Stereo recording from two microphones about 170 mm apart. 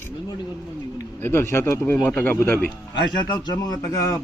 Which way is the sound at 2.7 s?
25° left (ahead or behind).